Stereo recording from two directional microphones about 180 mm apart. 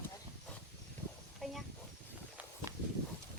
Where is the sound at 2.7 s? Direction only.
20° right (ahead or behind).